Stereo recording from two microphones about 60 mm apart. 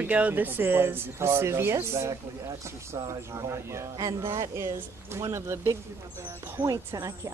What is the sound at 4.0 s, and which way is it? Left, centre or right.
Speech, right.